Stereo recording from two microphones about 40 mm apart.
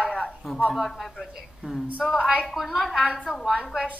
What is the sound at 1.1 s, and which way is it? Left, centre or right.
Speech, centre.